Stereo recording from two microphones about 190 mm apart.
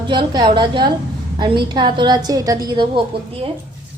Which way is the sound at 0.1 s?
25° right (ahead or behind).